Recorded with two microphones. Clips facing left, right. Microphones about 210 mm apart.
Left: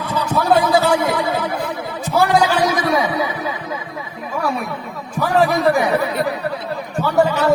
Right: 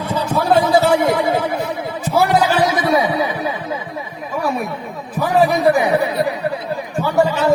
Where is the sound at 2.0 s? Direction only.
10° right (ahead or behind).